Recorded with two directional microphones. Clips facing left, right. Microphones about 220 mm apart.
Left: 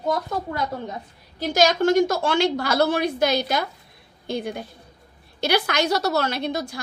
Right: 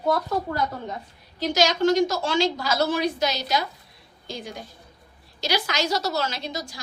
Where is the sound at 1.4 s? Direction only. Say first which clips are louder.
Left 2 dB; 50° left (ahead or behind).